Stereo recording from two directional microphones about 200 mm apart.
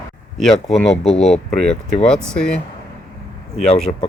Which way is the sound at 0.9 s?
30° left (ahead or behind).